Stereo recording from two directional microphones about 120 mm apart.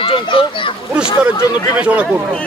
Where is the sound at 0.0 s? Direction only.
45° left (ahead or behind).